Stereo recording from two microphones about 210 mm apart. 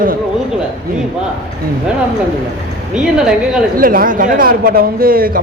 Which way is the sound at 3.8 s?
40° right (ahead or behind).